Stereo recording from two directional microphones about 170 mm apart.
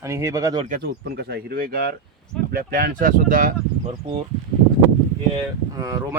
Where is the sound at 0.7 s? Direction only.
65° right (ahead or behind).